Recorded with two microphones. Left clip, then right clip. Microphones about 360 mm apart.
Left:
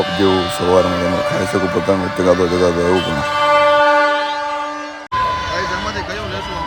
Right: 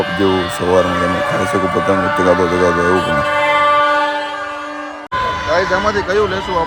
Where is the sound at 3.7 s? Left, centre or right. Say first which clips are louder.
Left 1 dB; left.